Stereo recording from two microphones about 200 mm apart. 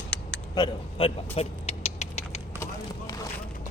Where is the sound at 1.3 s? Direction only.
30° left (ahead or behind).